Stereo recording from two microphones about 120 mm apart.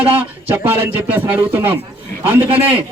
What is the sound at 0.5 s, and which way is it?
A man's voice, 15° right (ahead or behind).